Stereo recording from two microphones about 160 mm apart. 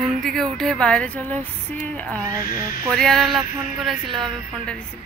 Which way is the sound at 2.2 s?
20° right (ahead or behind).